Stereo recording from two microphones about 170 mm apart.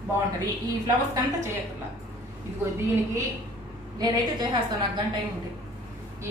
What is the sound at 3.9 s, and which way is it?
Speech, 25° right (ahead or behind).